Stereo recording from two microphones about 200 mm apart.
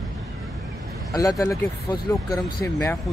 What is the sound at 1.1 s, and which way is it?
Speech, 15° left (ahead or behind).